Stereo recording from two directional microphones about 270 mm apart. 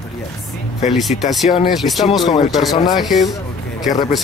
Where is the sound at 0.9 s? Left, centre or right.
Centre.